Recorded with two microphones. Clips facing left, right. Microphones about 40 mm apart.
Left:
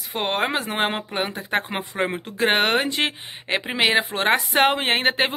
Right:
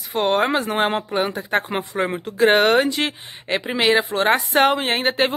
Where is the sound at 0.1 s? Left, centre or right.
Centre.